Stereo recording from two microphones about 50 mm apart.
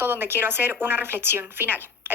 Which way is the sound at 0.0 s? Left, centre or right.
Right.